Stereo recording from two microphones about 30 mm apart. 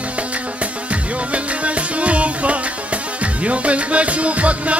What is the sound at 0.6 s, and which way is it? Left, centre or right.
Music, right.